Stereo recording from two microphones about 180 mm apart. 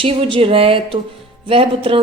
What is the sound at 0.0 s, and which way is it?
A woman's voice, 30° right (ahead or behind).